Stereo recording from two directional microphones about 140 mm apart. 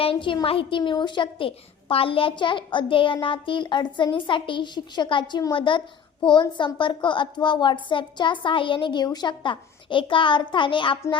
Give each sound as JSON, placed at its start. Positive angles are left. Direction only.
{"t": 0.0, "sound": "a child's voice", "side_deg": 40}